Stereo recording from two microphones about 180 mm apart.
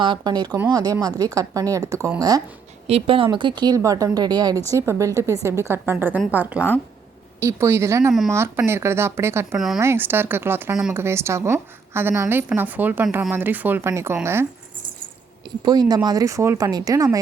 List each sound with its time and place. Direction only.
0.0 s speech: 25° right (ahead or behind)
2.8 s speech: 30° right (ahead or behind); by 9.6 s 15° right (ahead or behind)
9.6 s speech: centre (ahead or behind)
9.8 s speech: 10° right (ahead or behind)
15.4 s speech: 20° right (ahead or behind)